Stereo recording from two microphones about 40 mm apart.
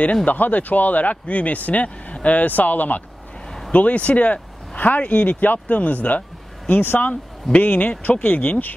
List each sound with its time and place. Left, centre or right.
0.0 s speech: left
7.5 s speech: left